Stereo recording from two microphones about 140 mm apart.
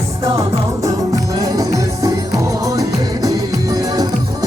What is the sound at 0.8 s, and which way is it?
Music, 25° right (ahead or behind).